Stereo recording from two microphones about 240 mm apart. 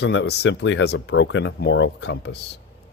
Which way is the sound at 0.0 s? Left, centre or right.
Left.